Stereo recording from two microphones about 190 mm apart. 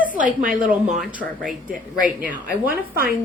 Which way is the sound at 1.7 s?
45° right (ahead or behind).